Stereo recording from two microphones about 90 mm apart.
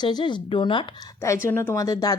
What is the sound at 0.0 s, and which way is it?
Speech, 55° left (ahead or behind).